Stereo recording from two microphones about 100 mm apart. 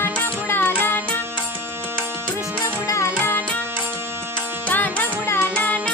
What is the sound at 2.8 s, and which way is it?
Music, 30° left (ahead or behind).